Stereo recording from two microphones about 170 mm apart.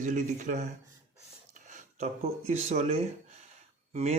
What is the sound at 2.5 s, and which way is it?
Speech, 40° right (ahead or behind).